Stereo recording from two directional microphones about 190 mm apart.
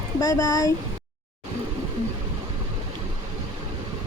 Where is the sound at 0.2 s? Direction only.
20° left (ahead or behind).